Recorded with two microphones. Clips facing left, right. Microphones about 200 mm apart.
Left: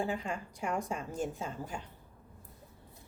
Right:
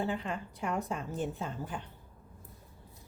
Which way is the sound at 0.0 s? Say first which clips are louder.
Right 1 dB; 15° left (ahead or behind).